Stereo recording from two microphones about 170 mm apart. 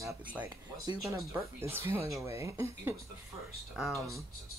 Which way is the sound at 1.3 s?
15° right (ahead or behind).